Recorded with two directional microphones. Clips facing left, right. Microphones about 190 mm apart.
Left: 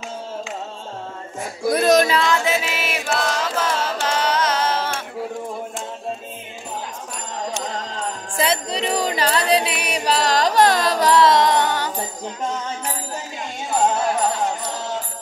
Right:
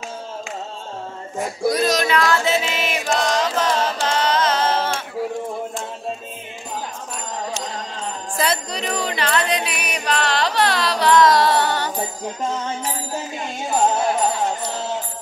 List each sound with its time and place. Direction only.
1.7 s a sound: 55° left (ahead or behind)
2.0 s music: 30° left (ahead or behind)
2.3 s music: 10° left (ahead or behind)
8.4 s music: 25° left (ahead or behind); by 11.1 s 45° left (ahead or behind)
11.1 s music: 25° left (ahead or behind)